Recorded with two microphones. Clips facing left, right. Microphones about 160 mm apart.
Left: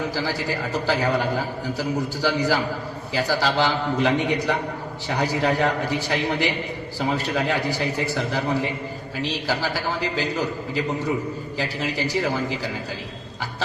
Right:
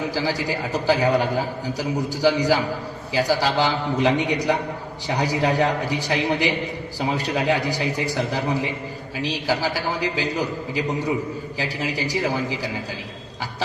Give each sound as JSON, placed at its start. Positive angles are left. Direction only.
{"t": 0.1, "sound": "a man's voice", "side_deg": -15}